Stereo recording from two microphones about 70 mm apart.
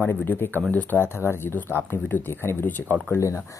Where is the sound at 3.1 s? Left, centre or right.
Left.